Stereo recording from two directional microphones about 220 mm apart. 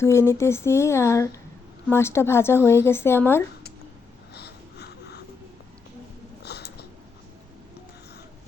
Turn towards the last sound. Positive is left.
turn(degrees=50)  # may be behind; listen again after turning